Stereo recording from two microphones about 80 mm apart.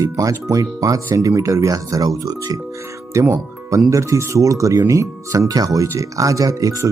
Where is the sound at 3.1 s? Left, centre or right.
Right.